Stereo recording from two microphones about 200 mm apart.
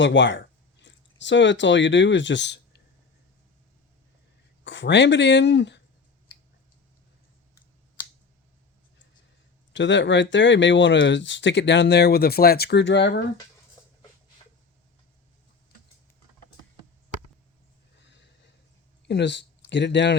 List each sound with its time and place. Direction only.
0.0 s speech: 65° left (ahead or behind)
4.6 s speech: 65° left (ahead or behind)
9.7 s speech: 65° left (ahead or behind)
13.8 s dog: 20° left (ahead or behind)
18.0 s a sound: 60° left (ahead or behind)
19.0 s speech: 60° left (ahead or behind)